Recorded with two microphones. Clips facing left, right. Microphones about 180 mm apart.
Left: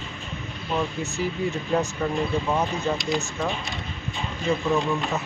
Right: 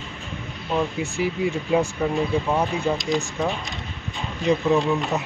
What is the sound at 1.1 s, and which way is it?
Speech, 10° right (ahead or behind).